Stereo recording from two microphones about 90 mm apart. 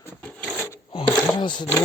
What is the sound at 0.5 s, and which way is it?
Wood, 25° left (ahead or behind).